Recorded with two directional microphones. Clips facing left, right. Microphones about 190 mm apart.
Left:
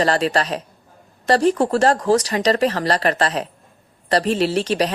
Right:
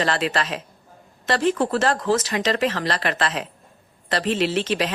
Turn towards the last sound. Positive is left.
turn(degrees=40)  # may be behind; listen again after turning